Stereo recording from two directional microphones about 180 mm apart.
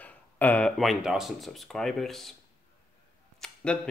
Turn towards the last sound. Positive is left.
turn(degrees=5)  # may be behind; listen again after turning